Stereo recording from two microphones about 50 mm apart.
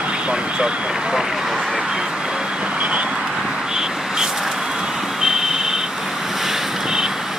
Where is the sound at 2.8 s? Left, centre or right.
Right.